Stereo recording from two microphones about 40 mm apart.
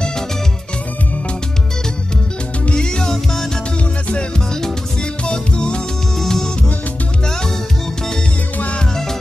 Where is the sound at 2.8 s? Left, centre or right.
Centre.